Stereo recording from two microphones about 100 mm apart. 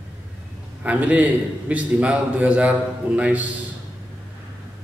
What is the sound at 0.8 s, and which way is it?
A man's voice, 15° right (ahead or behind).